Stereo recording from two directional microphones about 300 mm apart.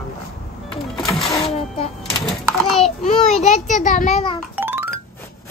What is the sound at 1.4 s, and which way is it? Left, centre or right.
Speech, centre.